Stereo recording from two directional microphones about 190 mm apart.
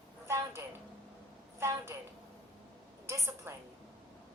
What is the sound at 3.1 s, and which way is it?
Speech, 15° right (ahead or behind).